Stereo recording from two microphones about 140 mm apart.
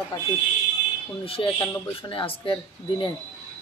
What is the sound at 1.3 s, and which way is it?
Speech, 40° left (ahead or behind).